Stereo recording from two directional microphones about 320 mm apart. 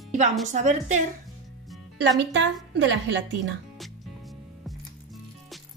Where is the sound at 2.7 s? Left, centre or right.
Right.